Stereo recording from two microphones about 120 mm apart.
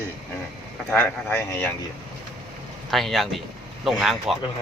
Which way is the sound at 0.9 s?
15° left (ahead or behind).